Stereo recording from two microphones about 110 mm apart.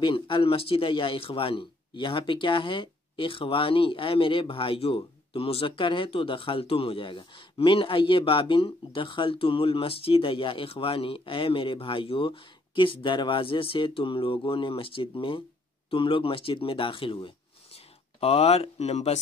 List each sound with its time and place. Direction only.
0.0 s speech: 50° left (ahead or behind)
18.2 s speech: 65° left (ahead or behind); by 19.1 s 80° left